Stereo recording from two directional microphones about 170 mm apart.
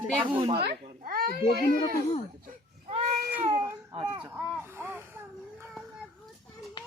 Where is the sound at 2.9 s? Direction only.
35° right (ahead or behind).